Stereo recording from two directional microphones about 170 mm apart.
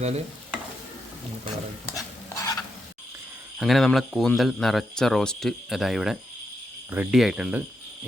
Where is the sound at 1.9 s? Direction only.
20° left (ahead or behind).